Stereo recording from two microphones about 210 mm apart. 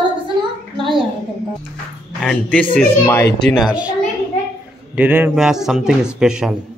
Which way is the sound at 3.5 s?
Centre (ahead or behind).